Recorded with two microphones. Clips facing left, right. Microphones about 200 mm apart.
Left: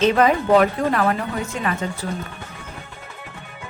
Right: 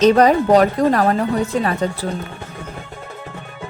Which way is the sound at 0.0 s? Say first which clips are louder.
Right 5 dB; 40° right (ahead or behind).